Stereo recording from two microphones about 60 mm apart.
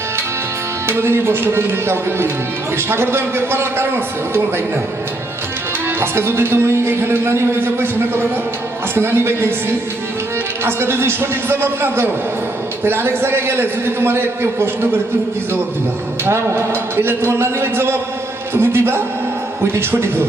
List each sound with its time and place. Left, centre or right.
0.9 s a man's voice: right
6.0 s a man's voice: right
16.2 s a man's voice: right